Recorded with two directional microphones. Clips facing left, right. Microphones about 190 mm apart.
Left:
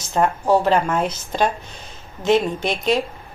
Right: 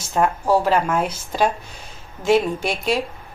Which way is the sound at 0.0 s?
5° right (ahead or behind).